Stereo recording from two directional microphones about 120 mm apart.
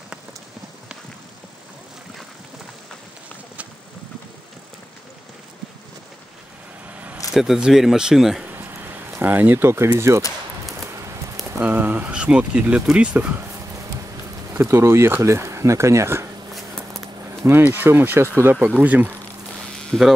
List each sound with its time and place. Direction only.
6.9 s vehicle: 10° right (ahead or behind)
7.3 s speech: 5° right (ahead or behind)
8.5 s a sound: 20° right (ahead or behind)
10.9 s clip-clop: 25° right (ahead or behind)
11.6 s speech: 15° right (ahead or behind)
14.5 s speech: 25° right (ahead or behind)
16.5 s a sound: centre (ahead or behind)
17.5 s speech: 15° right (ahead or behind)
19.9 s speech: 5° left (ahead or behind)